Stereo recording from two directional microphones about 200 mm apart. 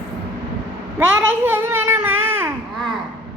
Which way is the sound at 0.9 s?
5° right (ahead or behind).